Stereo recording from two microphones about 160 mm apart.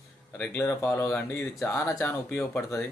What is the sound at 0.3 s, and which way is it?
Speech, 10° left (ahead or behind).